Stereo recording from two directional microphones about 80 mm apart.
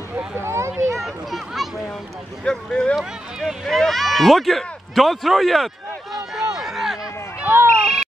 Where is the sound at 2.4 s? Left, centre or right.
Centre.